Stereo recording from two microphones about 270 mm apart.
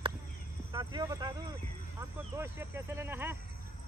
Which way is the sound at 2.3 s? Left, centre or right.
Centre.